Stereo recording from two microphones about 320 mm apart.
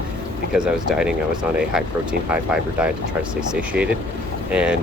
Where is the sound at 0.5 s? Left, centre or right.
Centre.